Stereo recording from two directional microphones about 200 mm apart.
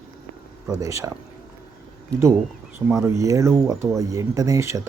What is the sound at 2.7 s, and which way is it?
Speech, 15° right (ahead or behind).